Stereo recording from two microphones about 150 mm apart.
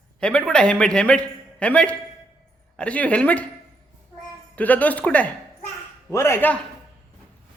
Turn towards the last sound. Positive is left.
turn(degrees=15)  # may be behind; listen again after turning